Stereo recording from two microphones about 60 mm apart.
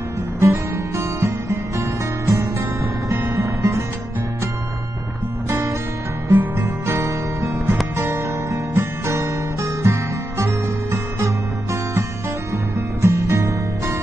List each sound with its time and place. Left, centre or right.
0.4 s music: right
5.5 s music: right
6.3 s music: right
8.0 s guitar: right
13.0 s music: right